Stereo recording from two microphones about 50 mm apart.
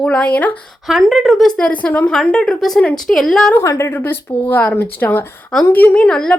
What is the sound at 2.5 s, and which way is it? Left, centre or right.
Speech, centre.